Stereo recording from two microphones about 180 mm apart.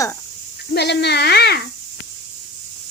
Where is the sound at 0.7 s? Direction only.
65° left (ahead or behind).